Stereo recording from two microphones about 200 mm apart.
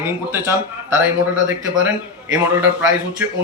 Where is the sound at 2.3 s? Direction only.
10° right (ahead or behind).